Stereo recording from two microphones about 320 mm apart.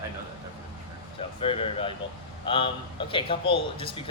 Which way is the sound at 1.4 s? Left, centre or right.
Centre.